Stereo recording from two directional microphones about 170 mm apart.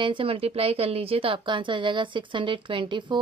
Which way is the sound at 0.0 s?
30° right (ahead or behind).